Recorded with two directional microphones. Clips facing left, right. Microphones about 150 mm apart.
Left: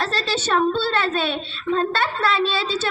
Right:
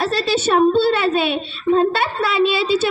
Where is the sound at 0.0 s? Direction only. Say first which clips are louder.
Right 6 dB; 10° right (ahead or behind).